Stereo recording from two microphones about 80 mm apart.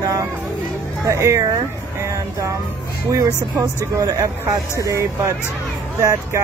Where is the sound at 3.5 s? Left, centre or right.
Right.